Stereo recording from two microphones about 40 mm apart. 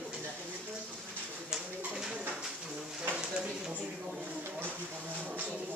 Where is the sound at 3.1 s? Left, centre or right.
Right.